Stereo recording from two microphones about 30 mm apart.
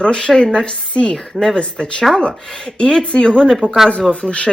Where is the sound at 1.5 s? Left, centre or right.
Left.